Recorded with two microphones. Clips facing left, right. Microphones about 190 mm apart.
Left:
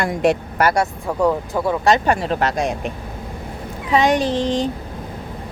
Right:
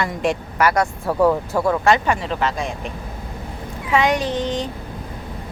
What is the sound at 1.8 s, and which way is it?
Speech, 40° left (ahead or behind).